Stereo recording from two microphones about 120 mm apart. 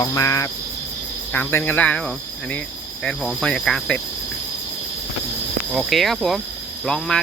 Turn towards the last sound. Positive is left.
turn(degrees=5)  # may be behind; listen again after turning